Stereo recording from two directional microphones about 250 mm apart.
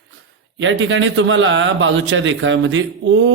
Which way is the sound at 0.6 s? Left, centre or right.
Right.